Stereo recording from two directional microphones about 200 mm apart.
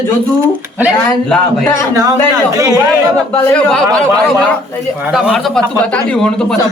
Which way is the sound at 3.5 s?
5° left (ahead or behind).